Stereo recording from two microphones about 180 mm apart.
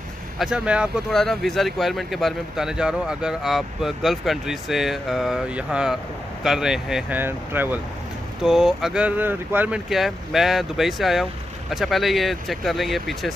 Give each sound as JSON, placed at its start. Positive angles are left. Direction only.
{"t": 0.4, "sound": "speech", "side_deg": -5}